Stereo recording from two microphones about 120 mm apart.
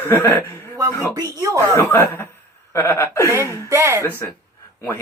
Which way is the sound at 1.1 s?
30° right (ahead or behind).